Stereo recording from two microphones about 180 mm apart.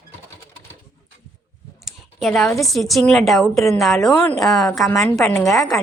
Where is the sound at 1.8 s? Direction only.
Centre (ahead or behind).